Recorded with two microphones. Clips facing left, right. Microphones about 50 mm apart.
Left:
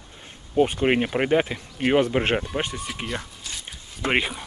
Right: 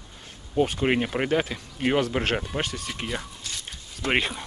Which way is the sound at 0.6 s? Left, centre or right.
Centre.